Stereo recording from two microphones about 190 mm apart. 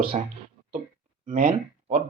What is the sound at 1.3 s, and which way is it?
Speech, 40° right (ahead or behind).